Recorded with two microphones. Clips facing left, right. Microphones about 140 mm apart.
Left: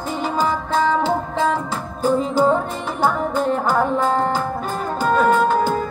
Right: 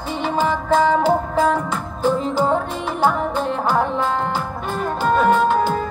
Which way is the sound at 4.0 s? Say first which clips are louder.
Left 2 dB; 40° left (ahead or behind).